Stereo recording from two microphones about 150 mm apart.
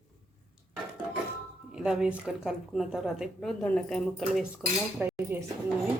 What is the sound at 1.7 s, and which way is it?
A woman's voice, 5° right (ahead or behind).